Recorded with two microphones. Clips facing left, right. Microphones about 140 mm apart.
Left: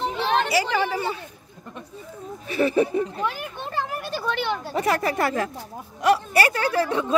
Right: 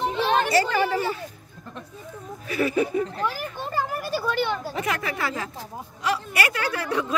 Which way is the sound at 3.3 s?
Centre (ahead or behind).